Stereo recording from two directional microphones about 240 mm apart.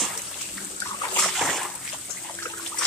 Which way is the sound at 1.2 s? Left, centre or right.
Centre.